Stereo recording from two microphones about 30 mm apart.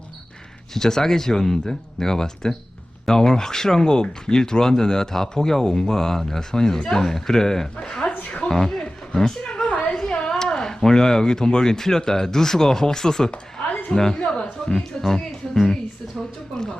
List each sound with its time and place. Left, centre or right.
0.7 s speech: centre
9.6 s a sound: left
10.2 s speech: left
14.2 s music: left
14.7 s speech: centre